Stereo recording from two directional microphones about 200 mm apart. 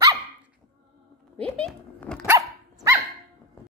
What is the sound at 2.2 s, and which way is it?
Dog, 15° right (ahead or behind).